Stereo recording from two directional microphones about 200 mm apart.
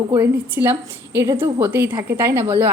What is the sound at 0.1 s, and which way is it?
A woman's voice, 10° right (ahead or behind).